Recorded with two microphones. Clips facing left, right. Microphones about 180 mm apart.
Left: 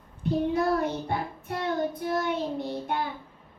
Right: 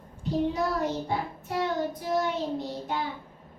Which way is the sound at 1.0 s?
60° left (ahead or behind).